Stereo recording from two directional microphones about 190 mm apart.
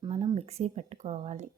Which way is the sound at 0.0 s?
25° right (ahead or behind).